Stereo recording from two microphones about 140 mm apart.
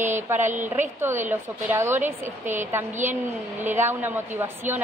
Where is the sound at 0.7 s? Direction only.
15° right (ahead or behind).